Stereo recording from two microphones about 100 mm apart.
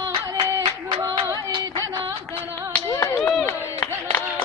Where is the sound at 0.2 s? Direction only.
35° right (ahead or behind).